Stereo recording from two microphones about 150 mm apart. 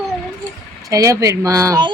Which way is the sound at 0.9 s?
20° right (ahead or behind).